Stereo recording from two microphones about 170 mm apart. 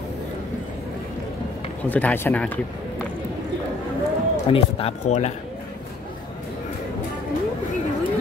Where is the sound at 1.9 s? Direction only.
10° left (ahead or behind).